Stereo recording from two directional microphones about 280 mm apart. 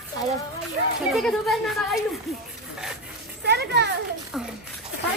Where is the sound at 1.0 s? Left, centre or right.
Centre.